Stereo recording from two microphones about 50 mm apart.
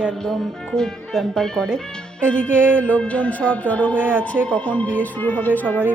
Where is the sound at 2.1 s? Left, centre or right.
Left.